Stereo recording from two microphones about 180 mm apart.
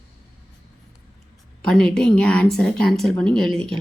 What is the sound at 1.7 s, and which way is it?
Speech, 5° left (ahead or behind).